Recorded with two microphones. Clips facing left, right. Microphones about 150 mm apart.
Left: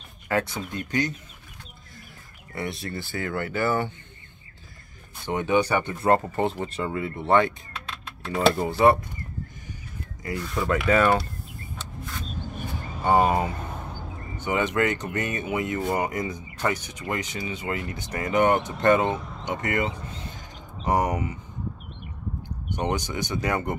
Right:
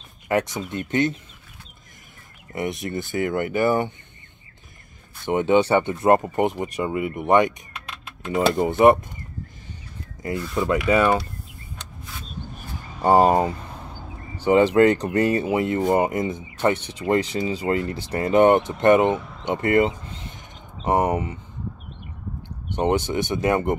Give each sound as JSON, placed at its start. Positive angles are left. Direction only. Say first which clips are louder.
{"t": 0.3, "sound": "speech", "louder": "right 3 dB", "side_deg": -20}
{"t": 2.5, "sound": "speech", "louder": "right 5 dB", "side_deg": -20}
{"t": 5.2, "sound": "speech", "louder": "right 5 dB", "side_deg": -25}
{"t": 10.4, "sound": "speech", "louder": "right 2 dB", "side_deg": 0}
{"t": 13.0, "sound": "speech", "louder": "right 5 dB", "side_deg": -40}
{"t": 22.7, "sound": "speech", "louder": "right 6 dB", "side_deg": -30}